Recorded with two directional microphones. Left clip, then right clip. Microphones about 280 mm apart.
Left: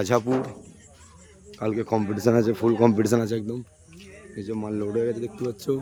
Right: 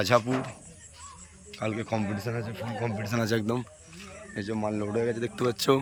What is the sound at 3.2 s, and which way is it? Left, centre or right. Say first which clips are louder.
Speech: right 1 dB; centre.